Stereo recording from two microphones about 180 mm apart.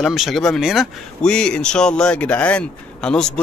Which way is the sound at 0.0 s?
Centre (ahead or behind).